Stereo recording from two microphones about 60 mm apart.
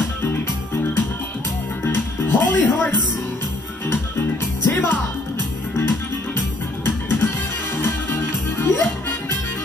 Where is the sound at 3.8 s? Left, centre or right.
Left.